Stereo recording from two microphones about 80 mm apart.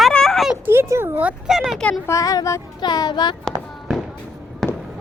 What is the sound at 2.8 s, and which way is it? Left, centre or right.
Speech, left.